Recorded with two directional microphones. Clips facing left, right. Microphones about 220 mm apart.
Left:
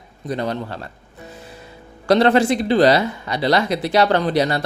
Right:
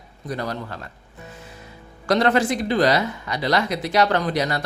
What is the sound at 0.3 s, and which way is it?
Speech, 25° left (ahead or behind).